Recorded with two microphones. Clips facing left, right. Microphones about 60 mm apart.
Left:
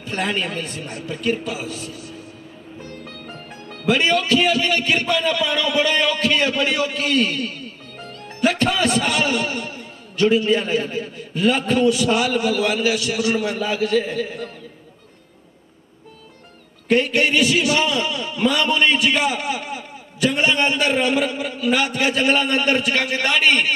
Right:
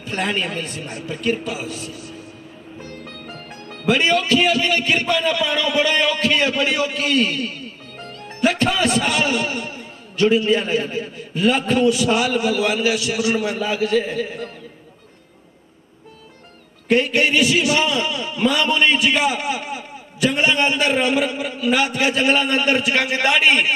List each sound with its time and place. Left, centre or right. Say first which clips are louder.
0.0 s a man's voice: right 1 dB; centre
2.8 s music: even; centre
3.3 s music: right 1 dB; right
3.8 s a man's voice: right 1 dB; centre
16.8 s a man's voice: even; centre